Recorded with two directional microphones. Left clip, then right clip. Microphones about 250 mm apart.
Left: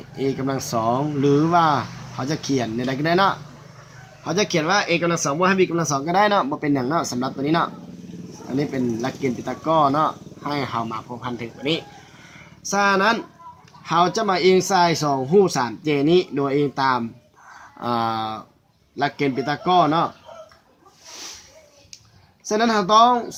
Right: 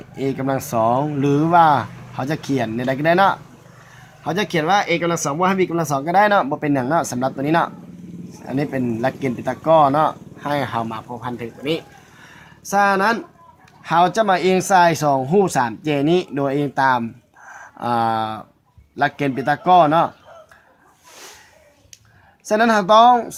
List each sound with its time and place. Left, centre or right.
0.2 s speech: right
5.4 s speech: centre
5.7 s speech: right
22.4 s speech: right